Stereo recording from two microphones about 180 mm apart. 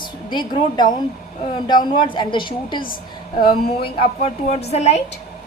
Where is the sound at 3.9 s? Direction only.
35° left (ahead or behind).